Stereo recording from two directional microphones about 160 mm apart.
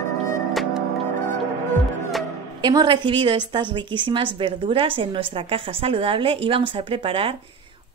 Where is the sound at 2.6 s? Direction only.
25° right (ahead or behind).